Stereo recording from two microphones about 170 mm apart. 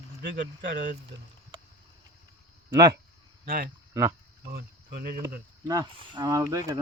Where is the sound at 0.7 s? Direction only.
55° right (ahead or behind).